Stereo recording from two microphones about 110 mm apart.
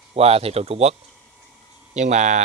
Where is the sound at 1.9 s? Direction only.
90° right.